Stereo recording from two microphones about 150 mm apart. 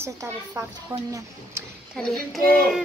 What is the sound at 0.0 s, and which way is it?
A woman's voice, 20° right (ahead or behind).